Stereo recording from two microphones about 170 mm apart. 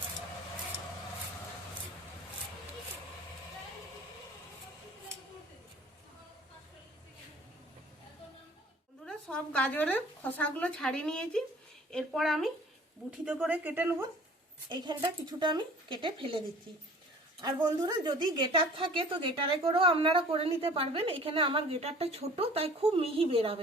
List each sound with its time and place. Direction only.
9.0 s a woman's voice: 5° left (ahead or behind); by 14.1 s 15° right (ahead or behind)
14.7 s speech: 25° right (ahead or behind)
17.4 s a woman's voice: 25° right (ahead or behind)